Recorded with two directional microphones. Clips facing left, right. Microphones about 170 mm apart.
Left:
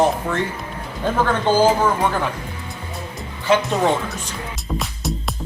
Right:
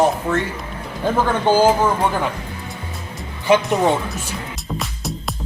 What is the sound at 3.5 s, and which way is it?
Speech, 15° right (ahead or behind).